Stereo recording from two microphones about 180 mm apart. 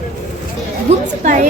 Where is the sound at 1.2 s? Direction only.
45° right (ahead or behind).